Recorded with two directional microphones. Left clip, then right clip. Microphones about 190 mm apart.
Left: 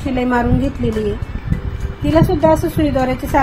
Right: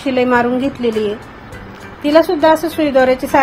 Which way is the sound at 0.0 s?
20° right (ahead or behind).